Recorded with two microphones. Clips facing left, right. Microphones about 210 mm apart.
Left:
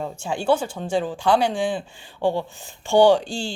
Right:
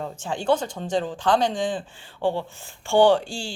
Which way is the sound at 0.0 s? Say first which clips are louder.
Left 2 dB; 10° left (ahead or behind).